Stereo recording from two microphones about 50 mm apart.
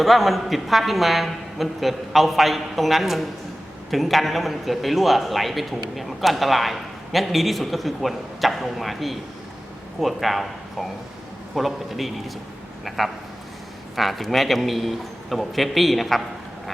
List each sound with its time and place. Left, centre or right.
0.0 s a man's voice: centre
13.9 s a man's voice: centre